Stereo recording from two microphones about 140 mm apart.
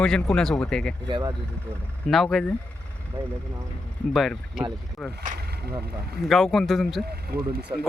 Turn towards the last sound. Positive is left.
turn(degrees=-30)  # may be behind; listen again after turning